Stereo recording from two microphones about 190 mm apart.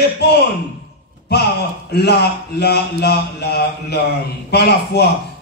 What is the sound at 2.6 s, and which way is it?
A man's voice, 60° left (ahead or behind).